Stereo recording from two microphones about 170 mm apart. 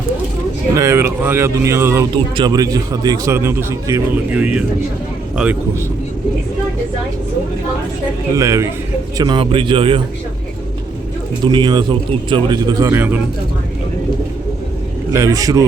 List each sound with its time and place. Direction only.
0.8 s a man's voice: 15° right (ahead or behind)
8.4 s a man's voice: 15° right (ahead or behind)
11.4 s a man's voice: 25° right (ahead or behind)
12.9 s speech: 10° right (ahead or behind)
15.1 s a man's voice: 20° right (ahead or behind)